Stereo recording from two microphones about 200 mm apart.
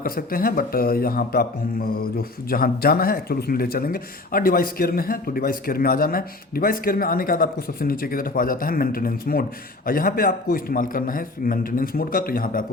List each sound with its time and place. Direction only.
0.0 s a man's voice: 45° left (ahead or behind)